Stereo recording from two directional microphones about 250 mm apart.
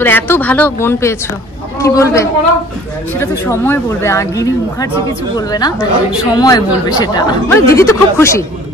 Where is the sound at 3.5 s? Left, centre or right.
Centre.